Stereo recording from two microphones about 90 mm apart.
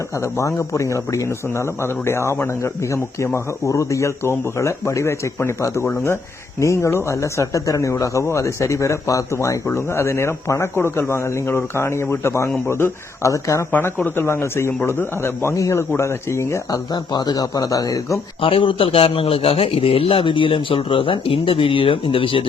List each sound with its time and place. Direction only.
0.2 s speech: 35° left (ahead or behind)
13.7 s a man's voice: 20° left (ahead or behind)
16.9 s a man's voice: 50° left (ahead or behind)
18.4 s speech: 75° left (ahead or behind)